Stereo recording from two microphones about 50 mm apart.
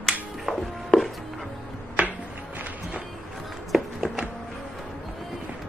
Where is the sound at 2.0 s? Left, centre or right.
Right.